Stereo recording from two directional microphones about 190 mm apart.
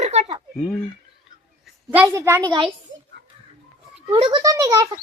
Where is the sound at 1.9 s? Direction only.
15° right (ahead or behind).